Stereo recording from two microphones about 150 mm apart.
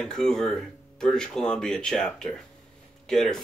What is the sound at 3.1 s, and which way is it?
Speech, 5° left (ahead or behind).